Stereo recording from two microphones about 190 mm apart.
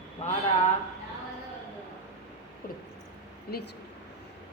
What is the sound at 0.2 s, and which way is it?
Speech, 40° left (ahead or behind).